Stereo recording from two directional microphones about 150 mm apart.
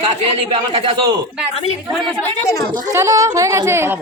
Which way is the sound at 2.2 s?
20° left (ahead or behind).